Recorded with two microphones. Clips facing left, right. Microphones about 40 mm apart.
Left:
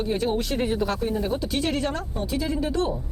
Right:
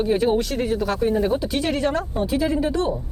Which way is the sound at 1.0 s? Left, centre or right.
Centre.